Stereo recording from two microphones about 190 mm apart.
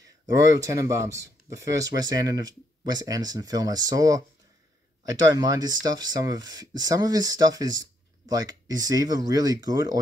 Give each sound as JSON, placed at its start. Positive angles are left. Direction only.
{"t": 0.5, "sound": "speech", "side_deg": -15}